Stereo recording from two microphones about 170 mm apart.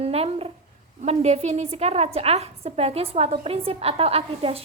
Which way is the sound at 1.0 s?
40° right (ahead or behind).